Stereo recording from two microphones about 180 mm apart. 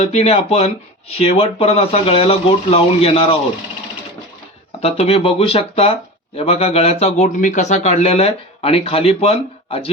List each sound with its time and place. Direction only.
0.0 s speech: 35° left (ahead or behind)
4.8 s speech: 35° left (ahead or behind)